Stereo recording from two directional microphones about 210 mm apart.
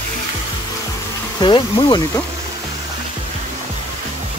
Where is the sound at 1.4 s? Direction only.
20° left (ahead or behind).